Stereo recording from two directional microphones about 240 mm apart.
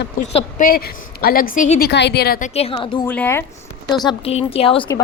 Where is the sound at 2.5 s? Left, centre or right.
Left.